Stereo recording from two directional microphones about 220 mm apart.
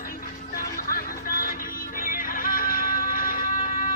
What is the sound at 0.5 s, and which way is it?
Music, 40° left (ahead or behind).